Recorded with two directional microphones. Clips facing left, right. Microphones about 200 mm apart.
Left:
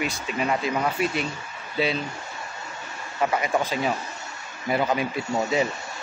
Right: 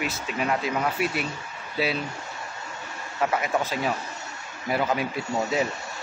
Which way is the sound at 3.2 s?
Centre (ahead or behind).